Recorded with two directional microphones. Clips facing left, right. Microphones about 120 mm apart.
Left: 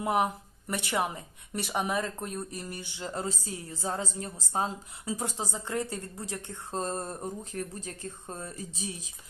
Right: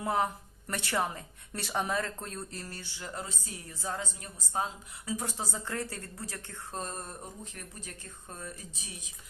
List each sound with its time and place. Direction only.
0.0 s speech: 20° left (ahead or behind); by 9.0 s 35° left (ahead or behind)